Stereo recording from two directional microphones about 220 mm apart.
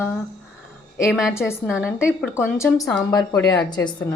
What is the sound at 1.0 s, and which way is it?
Speech, centre (ahead or behind).